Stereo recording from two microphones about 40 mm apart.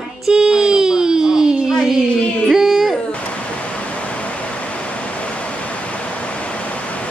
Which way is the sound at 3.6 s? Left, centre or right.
Left.